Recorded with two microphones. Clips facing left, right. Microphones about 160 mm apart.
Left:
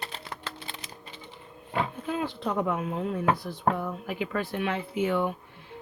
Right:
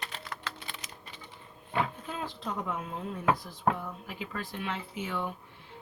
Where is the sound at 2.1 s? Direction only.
65° left (ahead or behind).